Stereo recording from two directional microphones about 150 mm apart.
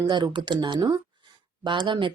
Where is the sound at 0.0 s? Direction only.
30° right (ahead or behind).